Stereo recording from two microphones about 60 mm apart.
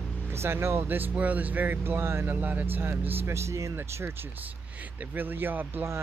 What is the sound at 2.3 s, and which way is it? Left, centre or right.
Speech, right.